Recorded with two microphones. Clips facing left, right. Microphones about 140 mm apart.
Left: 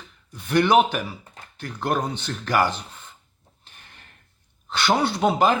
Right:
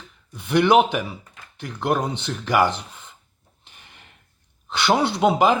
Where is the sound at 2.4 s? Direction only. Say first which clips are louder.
Right 2 dB; 20° right (ahead or behind).